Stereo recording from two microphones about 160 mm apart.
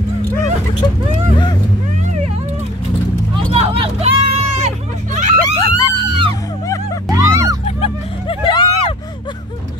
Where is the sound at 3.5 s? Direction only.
35° right (ahead or behind).